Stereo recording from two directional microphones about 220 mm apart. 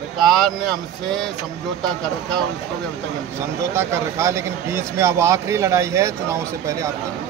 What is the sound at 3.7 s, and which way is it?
Speech, 10° right (ahead or behind).